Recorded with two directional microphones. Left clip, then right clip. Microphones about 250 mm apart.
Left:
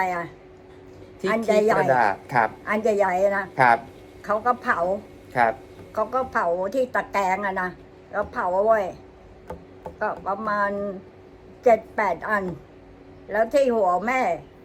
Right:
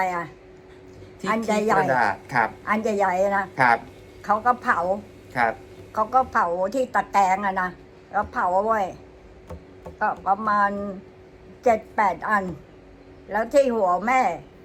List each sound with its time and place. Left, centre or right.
0.0 s a woman's voice: centre
1.9 s speech: centre
2.6 s a woman's voice: centre
3.5 s speech: centre
4.2 s a woman's voice: centre
5.3 s speech: centre
5.9 s a woman's voice: centre
10.0 s a woman's voice: centre